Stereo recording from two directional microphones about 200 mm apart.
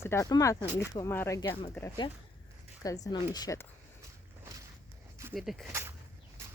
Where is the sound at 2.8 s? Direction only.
15° left (ahead or behind).